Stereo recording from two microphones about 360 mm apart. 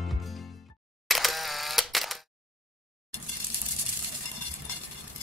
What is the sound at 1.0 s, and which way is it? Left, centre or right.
Camera, centre.